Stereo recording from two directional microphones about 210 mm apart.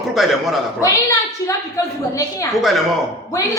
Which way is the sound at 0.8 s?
15° left (ahead or behind).